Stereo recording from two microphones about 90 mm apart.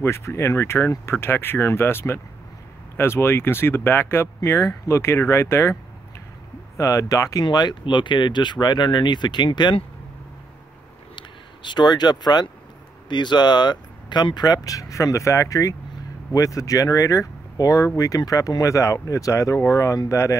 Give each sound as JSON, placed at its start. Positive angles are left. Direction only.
{"t": 0.0, "sound": "speech", "side_deg": 30}
{"t": 6.8, "sound": "speech", "side_deg": 40}
{"t": 7.4, "sound": "speech", "side_deg": 55}
{"t": 11.1, "sound": "speech", "side_deg": 55}